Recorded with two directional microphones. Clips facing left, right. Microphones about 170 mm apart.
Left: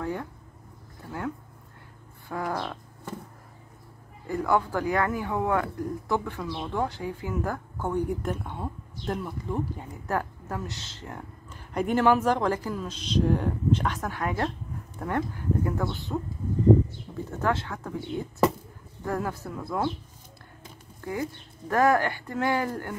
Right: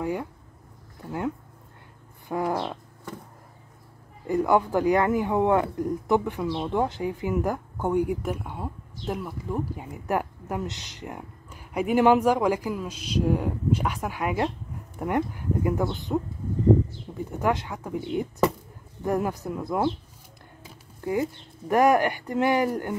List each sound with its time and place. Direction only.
0.0 s speech: 15° right (ahead or behind)
2.2 s cat: 20° right (ahead or behind)
4.3 s speech: 20° right (ahead or behind)
17.4 s speech: 15° right (ahead or behind)
21.0 s speech: 20° right (ahead or behind)